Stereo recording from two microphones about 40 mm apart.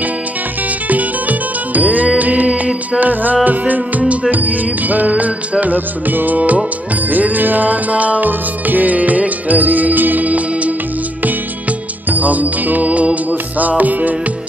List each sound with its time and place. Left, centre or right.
1.7 s music: right
12.1 s music: right